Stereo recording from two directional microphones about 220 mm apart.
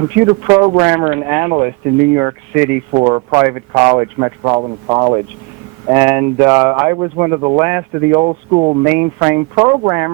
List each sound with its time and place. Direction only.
0.2 s speech: 15° right (ahead or behind)
8.2 s speech: 25° right (ahead or behind)
8.8 s speech: 10° right (ahead or behind)